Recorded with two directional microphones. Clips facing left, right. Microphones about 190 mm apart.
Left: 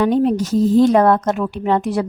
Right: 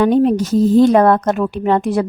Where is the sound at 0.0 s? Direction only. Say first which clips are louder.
Right 3 dB; 60° right (ahead or behind).